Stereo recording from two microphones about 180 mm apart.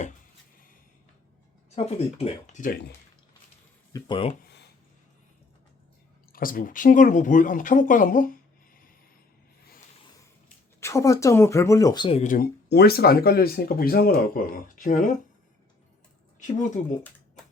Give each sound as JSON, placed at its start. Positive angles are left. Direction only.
{"t": 1.7, "sound": "speech", "side_deg": 35}
{"t": 3.9, "sound": "speech", "side_deg": 25}
{"t": 4.4, "sound": "a sound", "side_deg": 70}
{"t": 6.3, "sound": "speech", "side_deg": 50}
{"t": 10.8, "sound": "speech", "side_deg": 15}
{"t": 12.0, "sound": "speech", "side_deg": 35}
{"t": 12.3, "sound": "speech", "side_deg": 60}
{"t": 16.4, "sound": "speech", "side_deg": 40}